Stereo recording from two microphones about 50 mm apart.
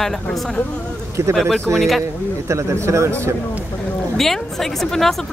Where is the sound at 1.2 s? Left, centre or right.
Right.